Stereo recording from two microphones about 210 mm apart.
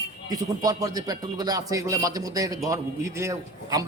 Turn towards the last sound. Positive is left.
turn(degrees=-15)  # may be behind; listen again after turning